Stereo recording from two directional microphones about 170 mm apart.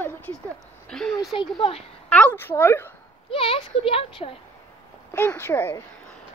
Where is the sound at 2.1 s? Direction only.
10° left (ahead or behind).